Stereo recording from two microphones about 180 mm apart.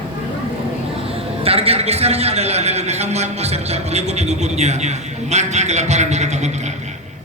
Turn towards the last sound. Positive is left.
turn(degrees=-40)  # may be behind; listen again after turning